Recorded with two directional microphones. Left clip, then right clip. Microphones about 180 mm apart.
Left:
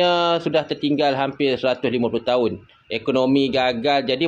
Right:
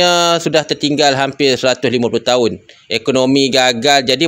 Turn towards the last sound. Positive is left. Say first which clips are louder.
# right 8 dB
turn(degrees=-50)  # may be behind; listen again after turning